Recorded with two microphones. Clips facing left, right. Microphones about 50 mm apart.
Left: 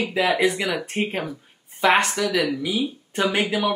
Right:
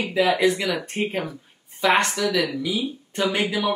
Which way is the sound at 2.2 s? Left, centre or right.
Left.